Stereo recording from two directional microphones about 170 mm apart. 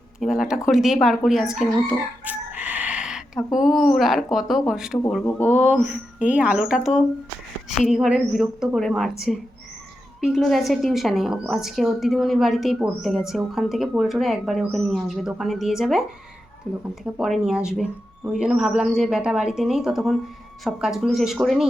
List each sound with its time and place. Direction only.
0.2 s speech: 5° right (ahead or behind)
5.2 s speech: 10° left (ahead or behind)
5.5 s a woman's voice: 10° right (ahead or behind)